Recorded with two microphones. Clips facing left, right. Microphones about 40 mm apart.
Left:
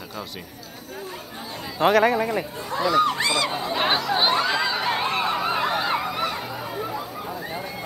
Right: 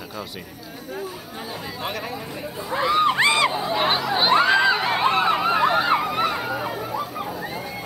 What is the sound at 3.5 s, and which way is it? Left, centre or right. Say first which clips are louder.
Chatter: right 1 dB; centre.